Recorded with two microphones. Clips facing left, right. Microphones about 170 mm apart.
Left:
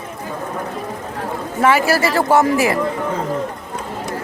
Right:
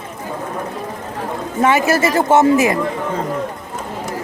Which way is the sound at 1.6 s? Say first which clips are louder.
Even; 20° right (ahead or behind).